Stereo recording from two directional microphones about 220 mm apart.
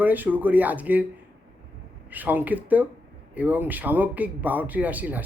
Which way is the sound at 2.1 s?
5° right (ahead or behind).